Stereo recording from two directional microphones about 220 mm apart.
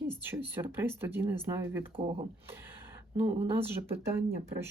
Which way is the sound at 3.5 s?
10° right (ahead or behind).